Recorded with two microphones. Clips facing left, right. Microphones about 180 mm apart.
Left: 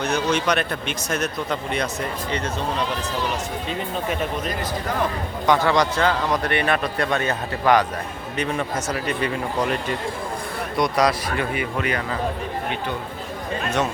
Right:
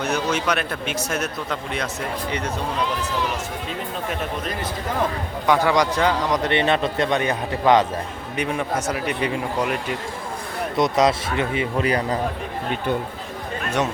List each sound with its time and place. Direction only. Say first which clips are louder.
0.0 s speech: left 1 dB; 5° right (ahead or behind)
3.7 s speech: left 3 dB; centre (ahead or behind)
5.5 s a man's voice: even; 10° right (ahead or behind)
10.8 s a man's voice: right 2 dB; 25° right (ahead or behind)